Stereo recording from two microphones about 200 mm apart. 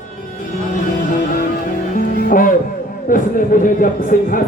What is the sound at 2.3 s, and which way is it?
Music, 45° left (ahead or behind).